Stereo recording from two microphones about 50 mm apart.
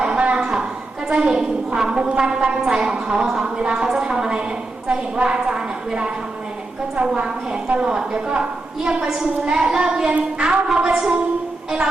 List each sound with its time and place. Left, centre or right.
0.0 s a sound: right
1.1 s a woman's voice: centre
7.7 s a woman's voice: centre